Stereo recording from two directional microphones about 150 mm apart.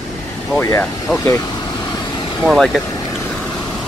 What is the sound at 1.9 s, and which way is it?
Vehicle, 30° left (ahead or behind).